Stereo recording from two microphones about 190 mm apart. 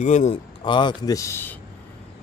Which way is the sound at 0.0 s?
40° left (ahead or behind).